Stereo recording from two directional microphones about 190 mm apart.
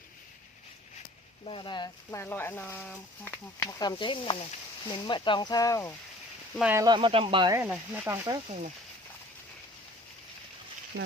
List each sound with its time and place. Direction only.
1.5 s speech: 25° left (ahead or behind)
2.0 s speech: 10° left (ahead or behind)
6.6 s sizzle: 10° right (ahead or behind)
6.8 s speech: 25° right (ahead or behind)
7.5 s sizzle: 10° right (ahead or behind)